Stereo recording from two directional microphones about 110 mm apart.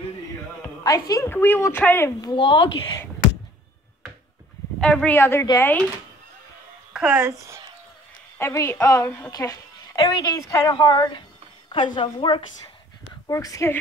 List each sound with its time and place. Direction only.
0.8 s a woman's voice: 30° left (ahead or behind)
1.3 s a woman's voice: 20° left (ahead or behind)
2.3 s a woman's voice: 50° left (ahead or behind)
4.7 s speech: 10° left (ahead or behind)
5.1 s a woman's voice: 20° left (ahead or behind)
6.9 s a sound: 5° right (ahead or behind)
7.2 s speech: 25° right (ahead or behind)
8.4 s a woman's voice: 25° left (ahead or behind)
9.9 s a woman's voice: 40° left (ahead or behind)
10.7 s a woman's voice: 40° left (ahead or behind)
13.3 s a woman's voice: 30° left (ahead or behind)